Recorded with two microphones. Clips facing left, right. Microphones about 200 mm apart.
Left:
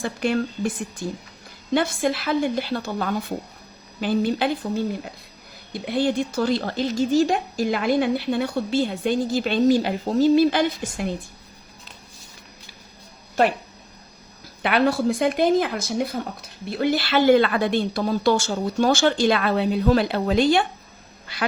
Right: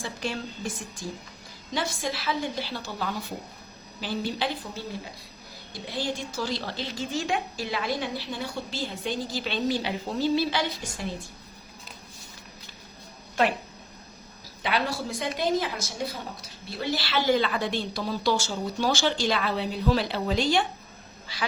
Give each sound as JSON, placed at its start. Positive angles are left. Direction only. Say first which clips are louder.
{"t": 0.0, "sound": "a woman's voice", "louder": "left 9 dB", "side_deg": 60}
{"t": 14.6, "sound": "speech", "louder": "left 9 dB", "side_deg": 60}